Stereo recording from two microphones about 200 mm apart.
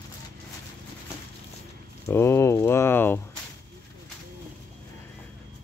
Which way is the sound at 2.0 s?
15° left (ahead or behind).